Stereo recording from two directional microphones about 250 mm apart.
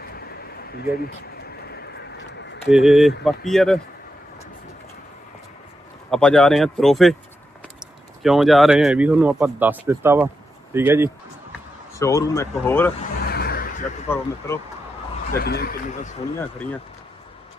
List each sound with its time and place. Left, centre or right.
0.0 s a sound: left
1.4 s bird: left
2.6 s speech: centre
6.1 s speech: centre
11.9 s speech: centre
13.3 s a sound: left
14.1 s speech: centre
15.3 s speech: left